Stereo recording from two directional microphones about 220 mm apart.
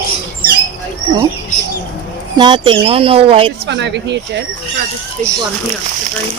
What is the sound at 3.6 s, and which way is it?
Speech, 50° right (ahead or behind).